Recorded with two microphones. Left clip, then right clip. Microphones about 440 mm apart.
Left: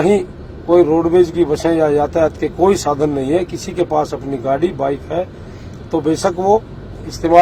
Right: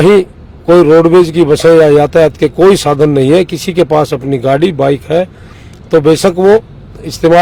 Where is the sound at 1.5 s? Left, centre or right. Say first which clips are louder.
Right 9 dB; right.